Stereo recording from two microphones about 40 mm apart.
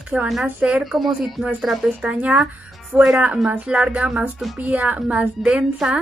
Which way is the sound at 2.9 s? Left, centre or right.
Right.